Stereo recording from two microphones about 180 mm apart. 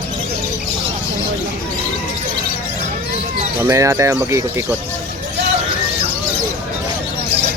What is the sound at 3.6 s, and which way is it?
Speech, 15° right (ahead or behind).